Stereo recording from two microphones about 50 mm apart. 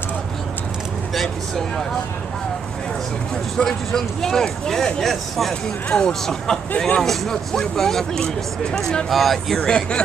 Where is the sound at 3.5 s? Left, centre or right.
Centre.